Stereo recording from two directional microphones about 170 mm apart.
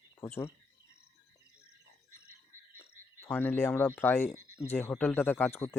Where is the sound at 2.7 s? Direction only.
15° left (ahead or behind).